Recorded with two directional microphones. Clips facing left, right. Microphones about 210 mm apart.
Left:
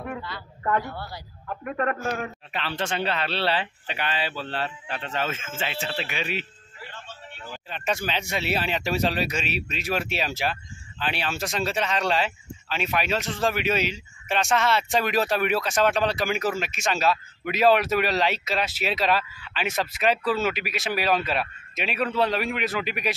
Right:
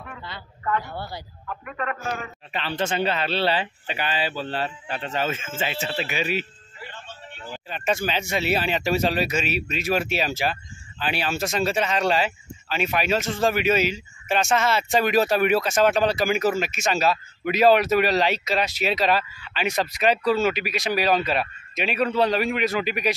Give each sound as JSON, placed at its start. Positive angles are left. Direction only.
{"t": 0.9, "sound": "a man's voice", "side_deg": -25}
{"t": 1.6, "sound": "a man's voice", "side_deg": 45}
{"t": 2.5, "sound": "speech", "side_deg": 0}